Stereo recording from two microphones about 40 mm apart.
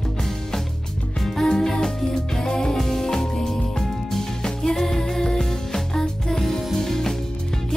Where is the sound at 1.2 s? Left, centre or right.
Centre.